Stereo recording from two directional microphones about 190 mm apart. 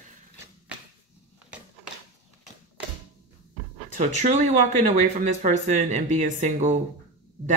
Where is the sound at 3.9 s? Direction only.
40° right (ahead or behind).